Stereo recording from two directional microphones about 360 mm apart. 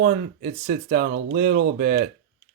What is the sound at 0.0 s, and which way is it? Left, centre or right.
Speech, right.